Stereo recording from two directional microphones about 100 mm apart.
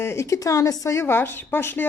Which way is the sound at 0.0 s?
30° left (ahead or behind).